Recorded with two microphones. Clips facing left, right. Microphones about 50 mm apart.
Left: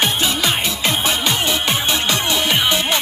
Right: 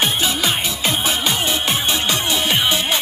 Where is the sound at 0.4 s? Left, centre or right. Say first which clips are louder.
Left 1 dB; left.